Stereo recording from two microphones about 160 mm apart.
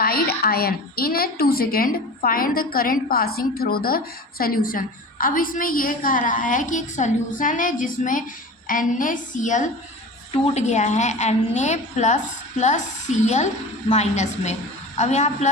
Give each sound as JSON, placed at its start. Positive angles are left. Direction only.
{"t": 0.0, "sound": "a woman's voice", "side_deg": 75}